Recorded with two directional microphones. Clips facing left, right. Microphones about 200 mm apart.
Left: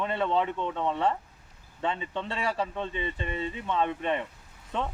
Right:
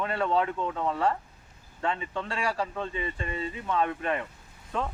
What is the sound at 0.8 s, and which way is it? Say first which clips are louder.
Speech: even; 20° left (ahead or behind).